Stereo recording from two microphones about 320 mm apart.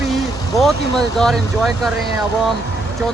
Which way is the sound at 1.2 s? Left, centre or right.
Centre.